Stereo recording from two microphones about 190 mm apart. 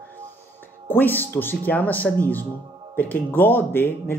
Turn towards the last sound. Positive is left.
turn(degrees=10)  # may be behind; listen again after turning